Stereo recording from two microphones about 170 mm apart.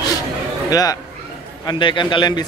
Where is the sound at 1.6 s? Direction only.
30° left (ahead or behind).